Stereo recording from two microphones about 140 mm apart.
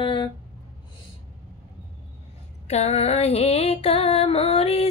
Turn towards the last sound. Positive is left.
turn(degrees=45)  # may be behind; listen again after turning